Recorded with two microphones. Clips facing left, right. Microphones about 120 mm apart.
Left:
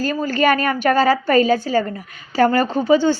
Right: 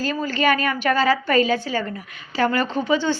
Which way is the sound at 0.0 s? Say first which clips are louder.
Left 4 dB; 45° left (ahead or behind).